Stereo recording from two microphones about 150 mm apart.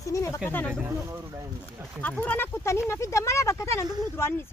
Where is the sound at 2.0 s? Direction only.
10° left (ahead or behind).